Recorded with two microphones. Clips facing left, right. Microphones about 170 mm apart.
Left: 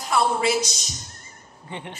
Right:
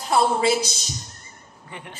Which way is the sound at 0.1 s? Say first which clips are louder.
Right 2 dB; 25° right (ahead or behind).